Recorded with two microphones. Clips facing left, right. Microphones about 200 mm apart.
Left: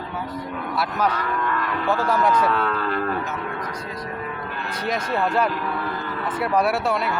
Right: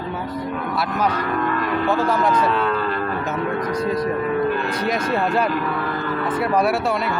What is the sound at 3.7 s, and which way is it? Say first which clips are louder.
Speech: right 11 dB; 40° right (ahead or behind).